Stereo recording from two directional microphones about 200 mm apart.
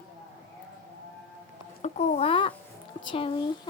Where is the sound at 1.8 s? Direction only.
30° left (ahead or behind).